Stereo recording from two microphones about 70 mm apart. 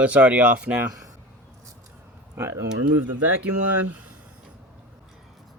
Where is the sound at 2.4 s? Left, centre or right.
Right.